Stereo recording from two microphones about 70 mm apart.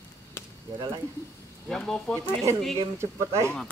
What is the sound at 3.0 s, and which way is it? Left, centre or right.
Speech, right.